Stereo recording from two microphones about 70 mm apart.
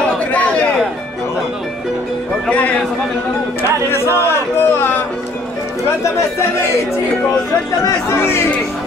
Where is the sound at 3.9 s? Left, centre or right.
Left.